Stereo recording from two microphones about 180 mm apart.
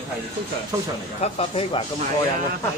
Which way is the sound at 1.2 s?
35° left (ahead or behind).